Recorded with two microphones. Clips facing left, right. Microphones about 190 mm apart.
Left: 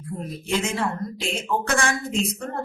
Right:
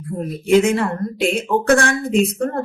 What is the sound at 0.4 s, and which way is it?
A woman's voice, 60° right (ahead or behind).